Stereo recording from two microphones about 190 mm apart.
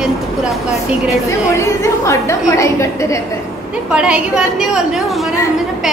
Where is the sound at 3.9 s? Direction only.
5° right (ahead or behind).